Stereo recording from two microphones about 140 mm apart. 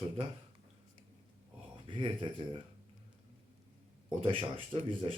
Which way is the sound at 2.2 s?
35° right (ahead or behind).